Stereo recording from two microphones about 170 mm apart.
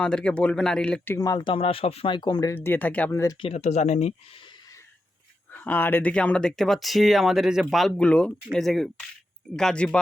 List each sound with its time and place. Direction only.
0.0 s speech: 5° left (ahead or behind); by 2.6 s 20° left (ahead or behind)
2.6 s speech: 10° left (ahead or behind)
3.4 s speech: 40° left (ahead or behind)
5.5 s speech: 10° left (ahead or behind)